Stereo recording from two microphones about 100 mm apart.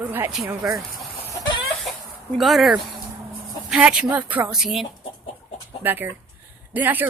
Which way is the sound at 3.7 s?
5° right (ahead or behind).